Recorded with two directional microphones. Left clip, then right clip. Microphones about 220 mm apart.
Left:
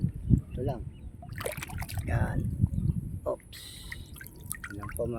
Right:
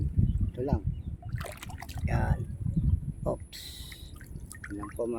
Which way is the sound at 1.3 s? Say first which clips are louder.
Left 6 dB; 30° left (ahead or behind).